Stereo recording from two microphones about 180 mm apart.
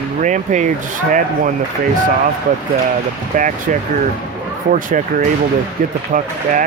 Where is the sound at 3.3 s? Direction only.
45° right (ahead or behind).